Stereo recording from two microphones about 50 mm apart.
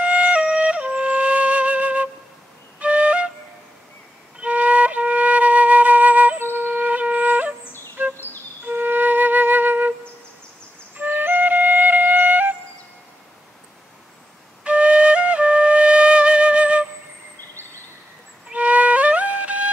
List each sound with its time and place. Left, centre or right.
0.0 s flute: right
4.4 s flute: right
6.7 s music: right
8.0 s a sound: right
8.6 s flute: right
11.0 s flute: right
14.6 s flute: right
18.5 s music: right